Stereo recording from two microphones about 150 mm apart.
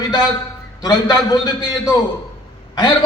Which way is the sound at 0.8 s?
25° left (ahead or behind).